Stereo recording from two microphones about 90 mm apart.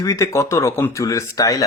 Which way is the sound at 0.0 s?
35° left (ahead or behind).